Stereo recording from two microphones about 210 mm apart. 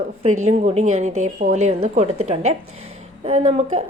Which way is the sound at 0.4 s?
30° right (ahead or behind).